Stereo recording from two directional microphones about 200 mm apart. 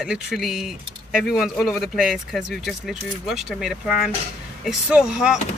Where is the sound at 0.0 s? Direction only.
Centre (ahead or behind).